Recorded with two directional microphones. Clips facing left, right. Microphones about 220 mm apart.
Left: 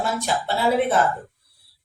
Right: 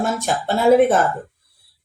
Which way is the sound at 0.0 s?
50° right (ahead or behind).